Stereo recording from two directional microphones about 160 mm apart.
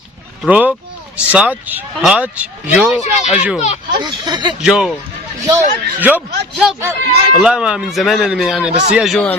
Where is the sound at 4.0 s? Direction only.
25° right (ahead or behind).